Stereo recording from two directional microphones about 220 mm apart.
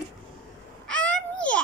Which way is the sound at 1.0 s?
5° left (ahead or behind).